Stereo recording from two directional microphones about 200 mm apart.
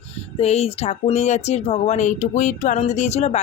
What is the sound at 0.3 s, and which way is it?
Speech, 30° left (ahead or behind).